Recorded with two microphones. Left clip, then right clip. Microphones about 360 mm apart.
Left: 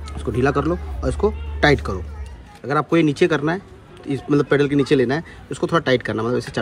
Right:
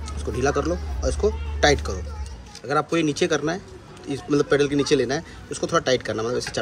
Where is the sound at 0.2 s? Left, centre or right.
Centre.